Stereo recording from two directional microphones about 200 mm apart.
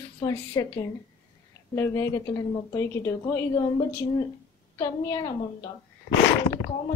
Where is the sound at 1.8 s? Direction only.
15° left (ahead or behind).